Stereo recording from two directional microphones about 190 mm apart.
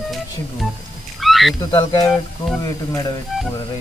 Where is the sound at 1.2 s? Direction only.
Centre (ahead or behind).